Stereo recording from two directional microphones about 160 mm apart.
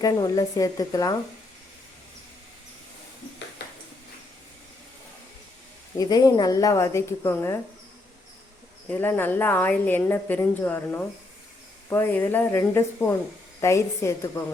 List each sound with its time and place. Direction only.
0.0 s a woman's voice: 20° left (ahead or behind)
6.0 s a woman's voice: 25° left (ahead or behind)
8.9 s a woman's voice: 15° left (ahead or behind)